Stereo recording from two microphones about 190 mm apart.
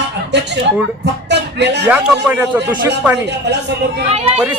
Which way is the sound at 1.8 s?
10° right (ahead or behind).